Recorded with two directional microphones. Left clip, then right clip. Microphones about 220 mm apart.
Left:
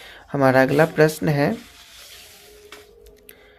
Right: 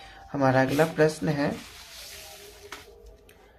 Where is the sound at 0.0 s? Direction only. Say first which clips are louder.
Left 6 dB; 40° left (ahead or behind).